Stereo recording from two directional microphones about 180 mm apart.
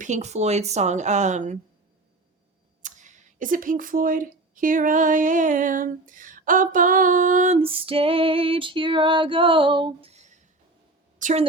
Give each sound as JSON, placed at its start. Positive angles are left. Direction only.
{"t": 0.0, "sound": "speech", "side_deg": -40}
{"t": 2.8, "sound": "a woman's voice", "side_deg": -45}